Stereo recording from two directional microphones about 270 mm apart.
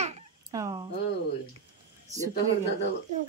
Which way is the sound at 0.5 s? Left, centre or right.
Centre.